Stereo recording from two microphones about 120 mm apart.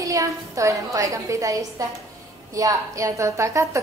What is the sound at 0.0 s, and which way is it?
A woman's voice, 25° right (ahead or behind).